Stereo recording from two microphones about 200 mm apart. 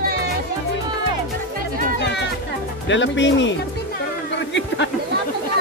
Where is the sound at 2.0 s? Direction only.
60° left (ahead or behind).